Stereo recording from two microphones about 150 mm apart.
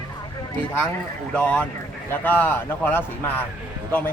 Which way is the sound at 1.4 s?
10° left (ahead or behind).